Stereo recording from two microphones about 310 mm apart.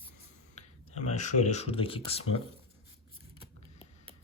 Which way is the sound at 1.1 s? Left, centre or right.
Left.